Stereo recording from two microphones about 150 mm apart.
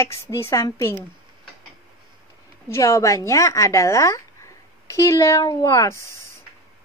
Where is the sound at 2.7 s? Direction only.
20° left (ahead or behind).